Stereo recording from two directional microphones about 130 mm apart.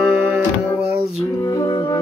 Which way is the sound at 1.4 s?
25° left (ahead or behind).